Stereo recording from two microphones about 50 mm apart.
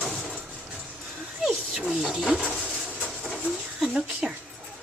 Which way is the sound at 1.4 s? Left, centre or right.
Centre.